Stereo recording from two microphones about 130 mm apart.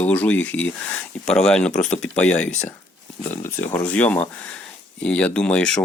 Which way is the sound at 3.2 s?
20° left (ahead or behind).